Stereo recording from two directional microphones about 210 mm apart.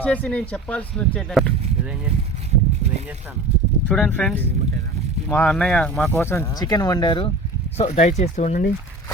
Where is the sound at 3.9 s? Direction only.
5° left (ahead or behind); by 8.7 s 35° left (ahead or behind).